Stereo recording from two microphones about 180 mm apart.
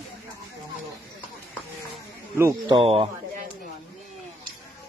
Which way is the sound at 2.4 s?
20° right (ahead or behind).